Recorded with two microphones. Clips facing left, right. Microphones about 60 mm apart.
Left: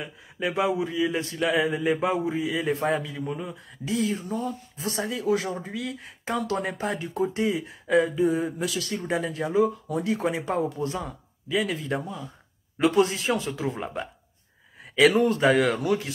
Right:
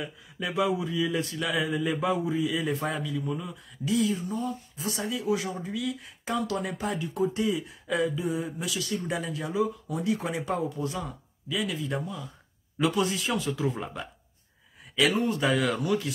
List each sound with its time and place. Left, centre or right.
0.0 s a man's voice: left
5.0 s a man's voice: left
8.6 s speech: left
8.9 s a man's voice: left
15.0 s speech: left
15.3 s a man's voice: left